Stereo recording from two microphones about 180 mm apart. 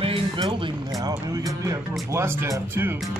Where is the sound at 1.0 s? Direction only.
20° right (ahead or behind).